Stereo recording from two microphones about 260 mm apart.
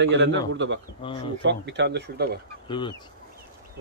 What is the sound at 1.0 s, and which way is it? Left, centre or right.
Speech, centre.